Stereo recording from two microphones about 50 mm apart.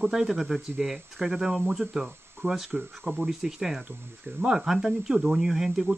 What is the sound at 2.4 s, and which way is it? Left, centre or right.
Speech, right.